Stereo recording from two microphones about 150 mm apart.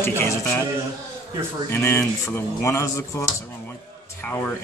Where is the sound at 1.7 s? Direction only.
15° left (ahead or behind).